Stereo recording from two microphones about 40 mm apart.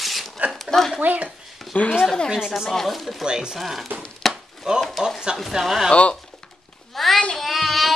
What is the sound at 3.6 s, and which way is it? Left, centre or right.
Speech, centre.